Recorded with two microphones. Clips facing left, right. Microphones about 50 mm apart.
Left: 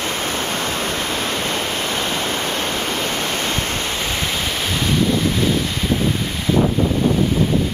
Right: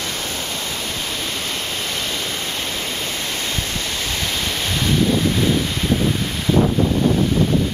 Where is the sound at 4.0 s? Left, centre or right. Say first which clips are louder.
Left 2 dB; centre.